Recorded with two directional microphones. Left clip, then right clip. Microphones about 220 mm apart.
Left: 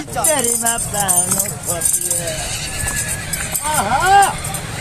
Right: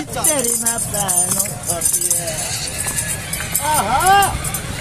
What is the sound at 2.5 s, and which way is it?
Speech, 40° left (ahead or behind).